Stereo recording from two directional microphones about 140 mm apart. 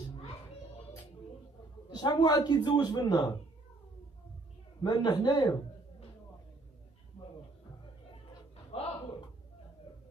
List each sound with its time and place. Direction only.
1.9 s a man's voice: 30° left (ahead or behind)
4.8 s a man's voice: 30° left (ahead or behind)
8.7 s a sound: 45° left (ahead or behind)